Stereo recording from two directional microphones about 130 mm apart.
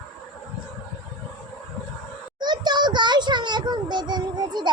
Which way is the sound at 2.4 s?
35° right (ahead or behind).